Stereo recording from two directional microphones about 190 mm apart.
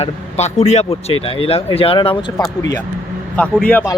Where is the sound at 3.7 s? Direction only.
10° left (ahead or behind).